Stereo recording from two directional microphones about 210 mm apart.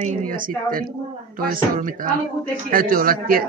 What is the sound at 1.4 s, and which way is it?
A man's voice, 40° right (ahead or behind).